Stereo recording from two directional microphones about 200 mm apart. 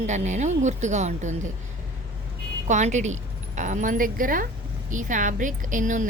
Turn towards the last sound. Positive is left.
turn(degrees=-40)  # may be behind; listen again after turning